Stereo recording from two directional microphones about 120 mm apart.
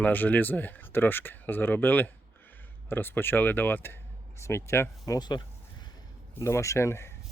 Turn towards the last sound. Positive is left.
turn(degrees=20)  # may be behind; listen again after turning